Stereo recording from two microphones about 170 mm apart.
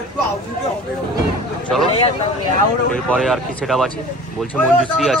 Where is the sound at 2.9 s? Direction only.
5° left (ahead or behind).